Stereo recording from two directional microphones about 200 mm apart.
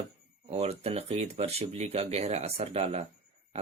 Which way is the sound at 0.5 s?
30° right (ahead or behind).